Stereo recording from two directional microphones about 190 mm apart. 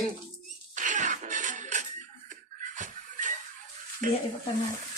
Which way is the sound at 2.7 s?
40° right (ahead or behind).